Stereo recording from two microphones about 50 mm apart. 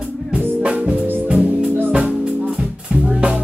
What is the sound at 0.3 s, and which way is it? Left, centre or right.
Music, right.